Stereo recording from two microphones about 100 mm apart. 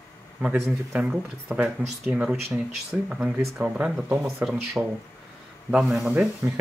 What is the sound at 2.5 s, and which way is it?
Speech, 5° right (ahead or behind).